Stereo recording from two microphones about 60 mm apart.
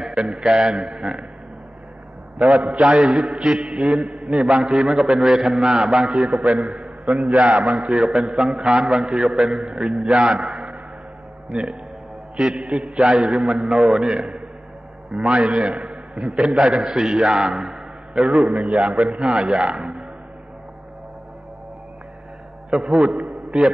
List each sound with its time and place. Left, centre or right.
0.4 s a man's voice: centre
2.5 s a man's voice: centre
3.8 s a sound: centre
4.4 s a man's voice: centre
6.8 s a sound: centre
7.2 s a man's voice: centre
7.6 s a man's voice: centre
8.0 s a man's voice: centre
12.4 s a man's voice: centre
14.1 s a man's voice: centre
17.6 s a sound: centre
18.7 s a man's voice: centre
22.7 s a man's voice: centre